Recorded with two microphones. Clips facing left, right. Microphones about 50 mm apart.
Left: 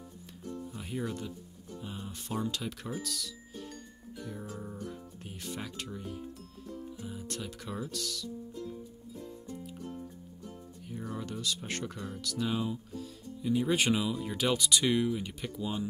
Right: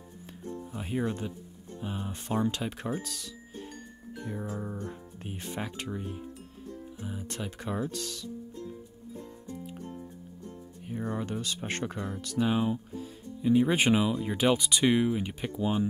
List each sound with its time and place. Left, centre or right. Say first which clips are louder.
0.7 s speech: right 6 dB; right
10.9 s speech: right 6 dB; right